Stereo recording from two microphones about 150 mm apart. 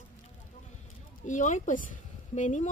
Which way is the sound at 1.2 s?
55° left (ahead or behind).